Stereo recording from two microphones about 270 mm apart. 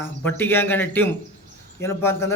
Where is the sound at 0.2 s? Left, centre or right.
Centre.